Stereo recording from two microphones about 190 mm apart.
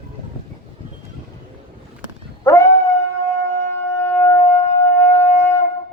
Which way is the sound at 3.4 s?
15° left (ahead or behind).